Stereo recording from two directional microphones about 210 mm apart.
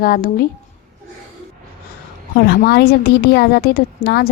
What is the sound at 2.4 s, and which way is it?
A woman's voice, 50° left (ahead or behind).